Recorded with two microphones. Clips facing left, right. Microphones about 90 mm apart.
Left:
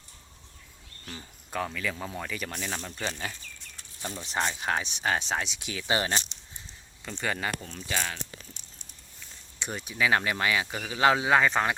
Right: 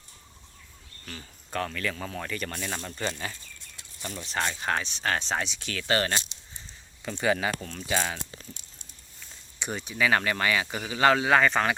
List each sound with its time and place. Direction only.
1.0 s speech: 10° left (ahead or behind)
4.0 s speech: 20° left (ahead or behind)
7.0 s speech: 10° right (ahead or behind)
7.3 s speech: 5° left (ahead or behind)
7.9 s speech: 10° right (ahead or behind)
9.6 s speech: centre (ahead or behind)